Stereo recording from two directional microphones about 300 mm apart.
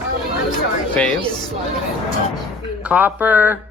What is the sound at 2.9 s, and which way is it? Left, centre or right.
Speech, centre.